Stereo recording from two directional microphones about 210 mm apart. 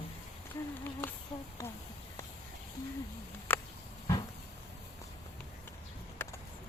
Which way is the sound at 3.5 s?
10° left (ahead or behind).